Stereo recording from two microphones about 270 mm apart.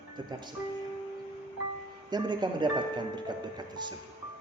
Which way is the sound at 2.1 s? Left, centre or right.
Centre.